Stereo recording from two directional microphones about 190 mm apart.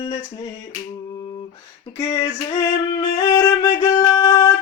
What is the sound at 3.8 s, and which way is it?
Music, 15° left (ahead or behind).